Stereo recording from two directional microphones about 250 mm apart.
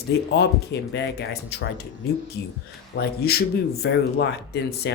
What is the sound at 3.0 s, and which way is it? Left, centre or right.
Speech, left.